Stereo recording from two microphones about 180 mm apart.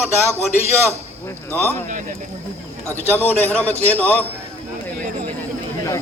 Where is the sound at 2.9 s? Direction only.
10° left (ahead or behind).